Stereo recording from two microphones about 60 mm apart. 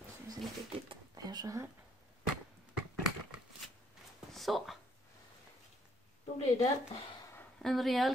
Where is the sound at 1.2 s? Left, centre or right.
Right.